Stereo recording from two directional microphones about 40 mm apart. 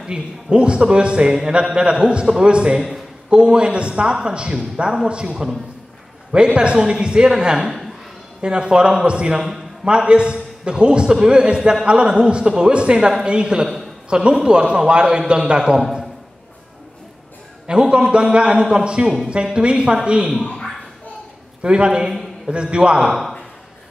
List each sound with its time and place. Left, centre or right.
0.0 s speech: right
2.7 s a man's voice: centre
3.3 s speech: right
7.6 s speech: centre
8.4 s speech: right
17.6 s speech: right
21.6 s speech: right